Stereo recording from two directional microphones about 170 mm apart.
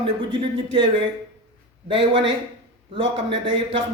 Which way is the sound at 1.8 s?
30° right (ahead or behind).